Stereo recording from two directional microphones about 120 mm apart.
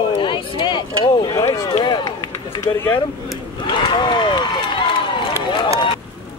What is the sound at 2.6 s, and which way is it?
Speech, 25° left (ahead or behind).